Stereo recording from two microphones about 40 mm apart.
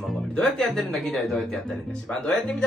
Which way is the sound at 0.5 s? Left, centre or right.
Centre.